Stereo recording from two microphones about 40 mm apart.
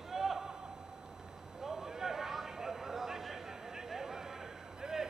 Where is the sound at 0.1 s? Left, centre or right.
Centre.